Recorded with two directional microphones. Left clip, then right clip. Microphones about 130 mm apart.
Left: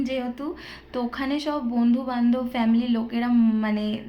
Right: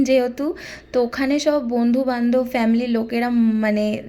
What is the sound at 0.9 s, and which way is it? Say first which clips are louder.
Speech: right 8 dB; 35° right (ahead or behind).